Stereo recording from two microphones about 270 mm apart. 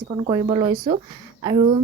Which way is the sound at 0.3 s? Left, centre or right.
Centre.